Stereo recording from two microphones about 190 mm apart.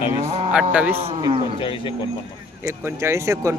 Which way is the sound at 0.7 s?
10° right (ahead or behind).